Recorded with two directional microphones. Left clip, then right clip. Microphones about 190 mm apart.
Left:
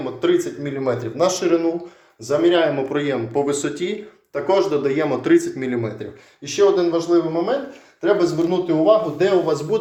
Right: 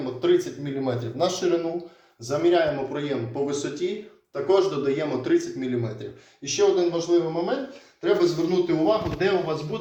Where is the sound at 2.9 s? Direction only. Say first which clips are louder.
Left 7 dB; 60° left (ahead or behind).